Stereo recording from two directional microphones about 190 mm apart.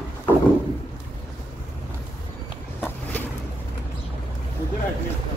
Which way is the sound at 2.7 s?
10° left (ahead or behind).